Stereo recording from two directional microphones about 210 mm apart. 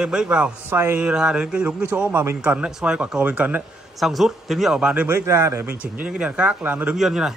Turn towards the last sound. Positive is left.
turn(degrees=0)  # may be behind; listen again after turning